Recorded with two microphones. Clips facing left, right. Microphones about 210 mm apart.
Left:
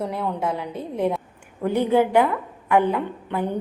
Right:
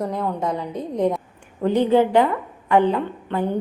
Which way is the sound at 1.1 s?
5° left (ahead or behind).